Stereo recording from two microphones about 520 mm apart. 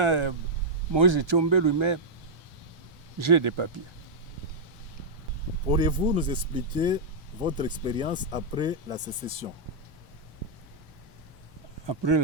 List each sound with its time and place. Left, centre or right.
0.0 s speech: right
3.2 s speech: right
5.7 s speech: centre
11.9 s speech: right